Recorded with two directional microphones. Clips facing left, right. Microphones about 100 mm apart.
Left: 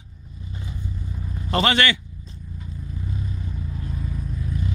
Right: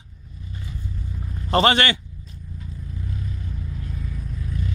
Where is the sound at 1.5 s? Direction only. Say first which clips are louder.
Right 2 dB; 35° right (ahead or behind).